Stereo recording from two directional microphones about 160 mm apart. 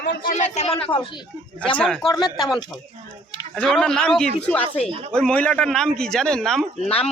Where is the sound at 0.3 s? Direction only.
45° left (ahead or behind).